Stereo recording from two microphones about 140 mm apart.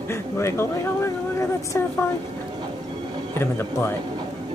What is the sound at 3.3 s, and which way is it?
Speech, 15° left (ahead or behind).